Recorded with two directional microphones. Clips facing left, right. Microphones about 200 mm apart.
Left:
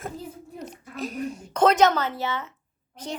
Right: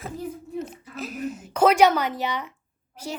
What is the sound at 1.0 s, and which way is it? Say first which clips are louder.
Speech: left 1 dB; 5° right (ahead or behind).